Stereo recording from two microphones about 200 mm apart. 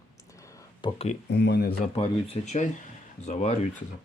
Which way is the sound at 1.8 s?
30° left (ahead or behind).